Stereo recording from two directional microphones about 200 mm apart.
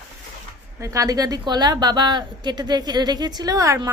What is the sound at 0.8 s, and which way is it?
A woman's voice, 15° right (ahead or behind).